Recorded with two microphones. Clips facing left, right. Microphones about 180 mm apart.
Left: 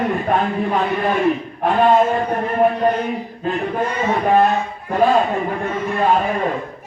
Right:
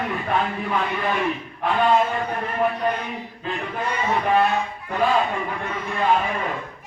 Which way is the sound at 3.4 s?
45° left (ahead or behind).